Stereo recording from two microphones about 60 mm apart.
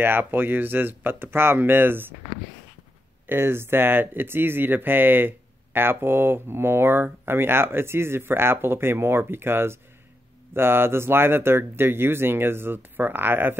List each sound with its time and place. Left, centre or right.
0.0 s speech: right
3.3 s speech: right